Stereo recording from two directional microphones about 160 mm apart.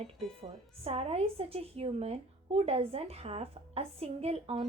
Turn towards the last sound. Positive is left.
turn(degrees=-40)  # may be behind; listen again after turning